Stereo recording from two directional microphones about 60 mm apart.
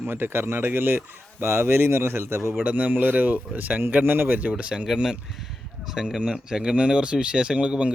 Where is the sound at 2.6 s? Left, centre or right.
Right.